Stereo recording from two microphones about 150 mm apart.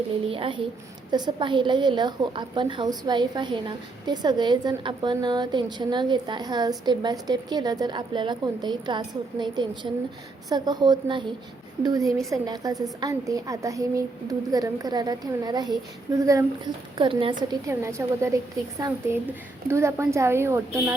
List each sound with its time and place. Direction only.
0.3 s a woman's voice: 35° right (ahead or behind)
17.7 s a woman's voice: 20° right (ahead or behind)